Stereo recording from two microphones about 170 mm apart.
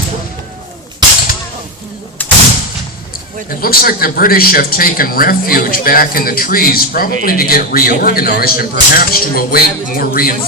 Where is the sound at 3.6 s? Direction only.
60° left (ahead or behind).